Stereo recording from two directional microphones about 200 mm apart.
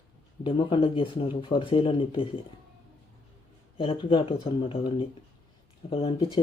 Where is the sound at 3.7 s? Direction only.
25° left (ahead or behind).